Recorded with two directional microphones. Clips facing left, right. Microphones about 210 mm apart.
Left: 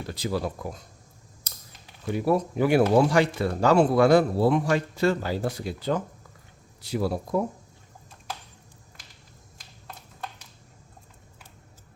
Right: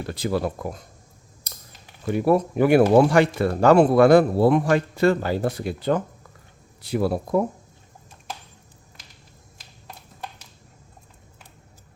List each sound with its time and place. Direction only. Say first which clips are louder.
0.1 s speech: right 4 dB; 55° right (ahead or behind)
2.1 s speech: right 4 dB; 60° right (ahead or behind)